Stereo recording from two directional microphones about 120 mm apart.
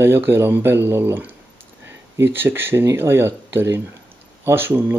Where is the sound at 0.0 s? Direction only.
20° right (ahead or behind).